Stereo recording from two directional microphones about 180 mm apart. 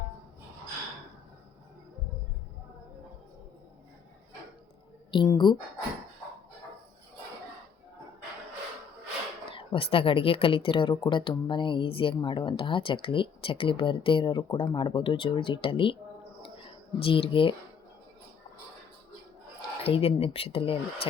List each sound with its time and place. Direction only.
5.1 s speech: 25° left (ahead or behind)
9.5 s speech: 30° left (ahead or behind)
16.4 s a sound: 30° left (ahead or behind)
19.8 s speech: 35° left (ahead or behind)